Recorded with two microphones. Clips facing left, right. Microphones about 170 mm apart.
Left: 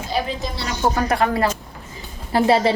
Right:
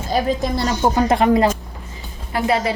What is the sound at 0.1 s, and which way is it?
Speech, 45° right (ahead or behind).